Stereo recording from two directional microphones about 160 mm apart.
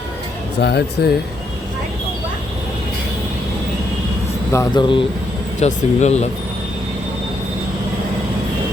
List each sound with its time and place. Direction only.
0.6 s speech: 90° left
4.5 s speech: 25° left (ahead or behind)
5.5 s speech: 45° left (ahead or behind)